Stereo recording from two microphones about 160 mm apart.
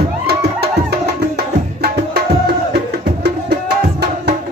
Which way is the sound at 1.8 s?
80° right.